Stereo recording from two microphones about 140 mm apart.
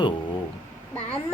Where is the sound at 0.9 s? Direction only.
10° left (ahead or behind).